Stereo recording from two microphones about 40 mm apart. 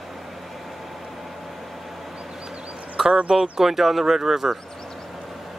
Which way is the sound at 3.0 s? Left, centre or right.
Right.